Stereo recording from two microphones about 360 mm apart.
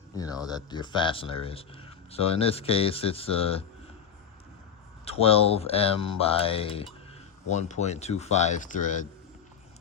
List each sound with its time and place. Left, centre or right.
0.1 s speech: centre
5.0 s speech: centre